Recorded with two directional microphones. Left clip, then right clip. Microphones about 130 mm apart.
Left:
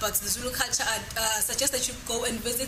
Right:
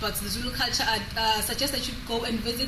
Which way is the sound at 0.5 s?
15° left (ahead or behind).